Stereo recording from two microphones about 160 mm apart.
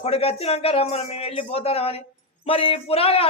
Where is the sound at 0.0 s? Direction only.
40° left (ahead or behind).